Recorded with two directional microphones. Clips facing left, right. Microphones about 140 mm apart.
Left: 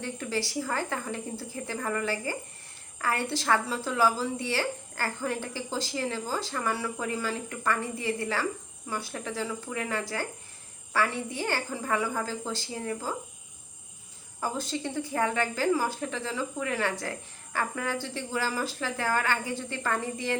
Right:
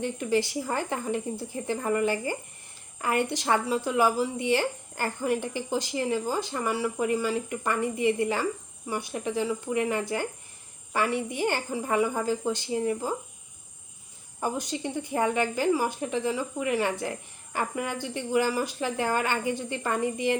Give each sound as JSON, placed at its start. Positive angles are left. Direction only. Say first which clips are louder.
{"t": 0.0, "sound": "a woman's voice", "louder": "right 6 dB", "side_deg": -20}
{"t": 14.4, "sound": "speech", "louder": "right 2 dB", "side_deg": -20}